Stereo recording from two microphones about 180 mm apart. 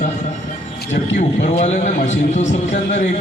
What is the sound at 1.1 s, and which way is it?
A man's voice, 40° left (ahead or behind).